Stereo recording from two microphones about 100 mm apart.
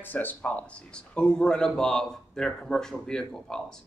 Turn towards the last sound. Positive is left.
turn(degrees=5)  # may be behind; listen again after turning